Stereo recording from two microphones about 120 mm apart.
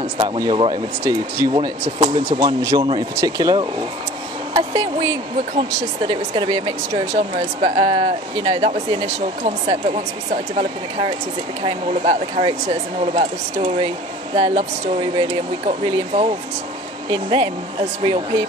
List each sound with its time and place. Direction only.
0.2 s speech: 55° right (ahead or behind)
1.4 s speech: 35° right (ahead or behind)
7.0 s speech: 60° right (ahead or behind)
9.4 s speech: 60° right (ahead or behind)
10.6 s speech: 50° right (ahead or behind)
16.1 s speech: 55° right (ahead or behind)
17.1 s speech: 45° right (ahead or behind)